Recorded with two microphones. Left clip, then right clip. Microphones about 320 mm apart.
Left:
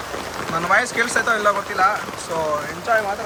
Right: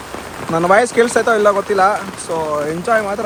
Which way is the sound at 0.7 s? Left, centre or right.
Centre.